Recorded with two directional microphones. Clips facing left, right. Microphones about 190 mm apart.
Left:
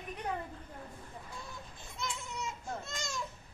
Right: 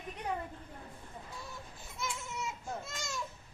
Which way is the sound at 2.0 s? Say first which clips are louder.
Even; 5° right (ahead or behind).